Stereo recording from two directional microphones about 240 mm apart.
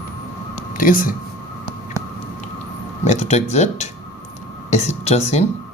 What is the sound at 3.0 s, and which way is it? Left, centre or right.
Speech, left.